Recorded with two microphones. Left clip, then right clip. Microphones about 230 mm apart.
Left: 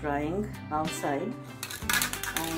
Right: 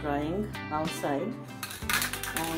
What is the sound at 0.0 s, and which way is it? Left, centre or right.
Speech, centre.